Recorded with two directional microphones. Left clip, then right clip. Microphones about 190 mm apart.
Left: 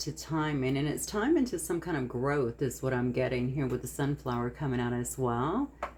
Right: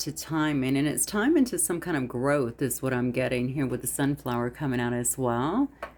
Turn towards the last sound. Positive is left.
turn(degrees=-50)  # may be behind; listen again after turning